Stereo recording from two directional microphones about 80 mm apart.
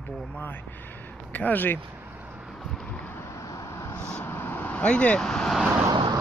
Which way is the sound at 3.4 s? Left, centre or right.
Left.